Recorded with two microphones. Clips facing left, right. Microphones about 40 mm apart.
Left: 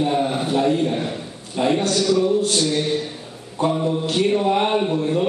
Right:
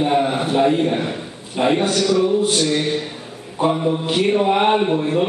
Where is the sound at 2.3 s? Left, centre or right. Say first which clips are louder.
Right 2 dB; centre.